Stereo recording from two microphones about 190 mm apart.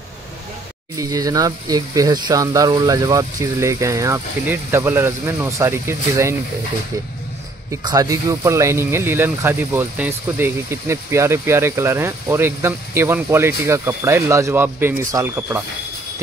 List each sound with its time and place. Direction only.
0.9 s speech: 20° right (ahead or behind)
7.7 s speech: 20° right (ahead or behind)